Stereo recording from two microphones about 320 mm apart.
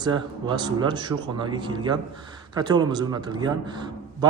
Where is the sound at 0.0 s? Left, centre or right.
Centre.